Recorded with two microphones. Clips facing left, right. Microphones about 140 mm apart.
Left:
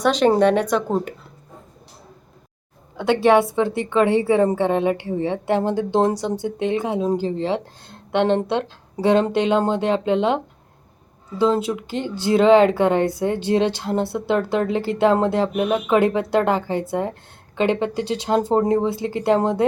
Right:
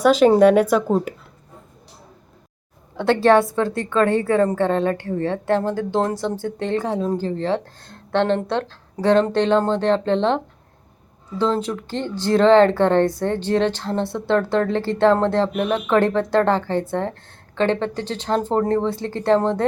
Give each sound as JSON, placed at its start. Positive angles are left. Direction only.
{"t": 0.0, "sound": "speech", "side_deg": -5}
{"t": 3.8, "sound": "speech", "side_deg": 20}